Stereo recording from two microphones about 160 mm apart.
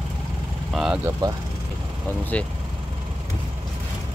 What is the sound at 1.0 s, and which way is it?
Speech, 25° right (ahead or behind).